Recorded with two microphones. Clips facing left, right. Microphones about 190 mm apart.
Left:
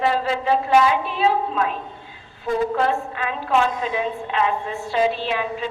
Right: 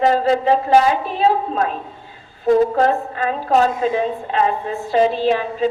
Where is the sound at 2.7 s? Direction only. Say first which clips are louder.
Right 4 dB; 40° right (ahead or behind).